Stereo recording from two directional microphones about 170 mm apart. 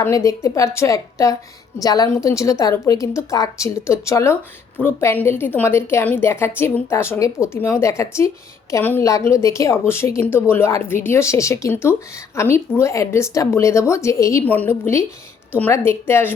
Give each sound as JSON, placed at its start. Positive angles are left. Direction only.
{"t": 0.0, "sound": "a woman's voice", "side_deg": 20}